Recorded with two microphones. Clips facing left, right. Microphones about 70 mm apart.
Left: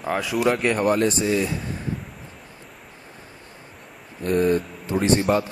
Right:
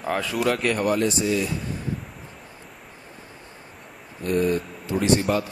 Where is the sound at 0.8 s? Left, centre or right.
Left.